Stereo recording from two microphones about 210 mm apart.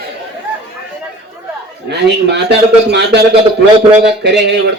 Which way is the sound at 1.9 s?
55° right (ahead or behind).